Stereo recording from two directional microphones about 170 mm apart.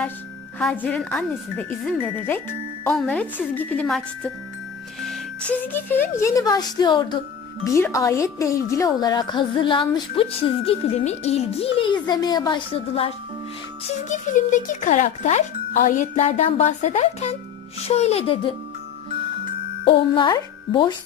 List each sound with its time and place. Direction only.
0.6 s a woman's voice: 5° left (ahead or behind); by 13.1 s 35° left (ahead or behind)
14.0 s speech: 45° left (ahead or behind); by 18.5 s 30° left (ahead or behind)
19.9 s a woman's voice: 30° left (ahead or behind)